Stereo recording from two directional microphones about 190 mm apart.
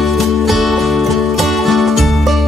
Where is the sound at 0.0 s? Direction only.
Centre (ahead or behind).